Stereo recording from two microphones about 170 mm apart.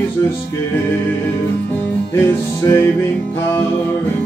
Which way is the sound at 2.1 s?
15° left (ahead or behind).